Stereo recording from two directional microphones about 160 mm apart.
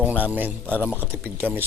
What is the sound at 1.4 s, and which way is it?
Speech, 10° right (ahead or behind).